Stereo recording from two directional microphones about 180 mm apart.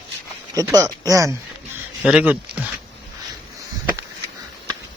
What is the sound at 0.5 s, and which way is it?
Speech, 20° right (ahead or behind).